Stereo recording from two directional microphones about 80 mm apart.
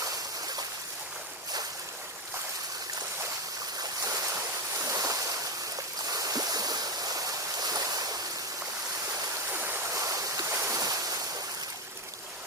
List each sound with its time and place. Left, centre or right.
4.0 s waves: right
6.1 s stream: right
9.5 s stream: right
9.9 s stream: right
10.6 s boat: right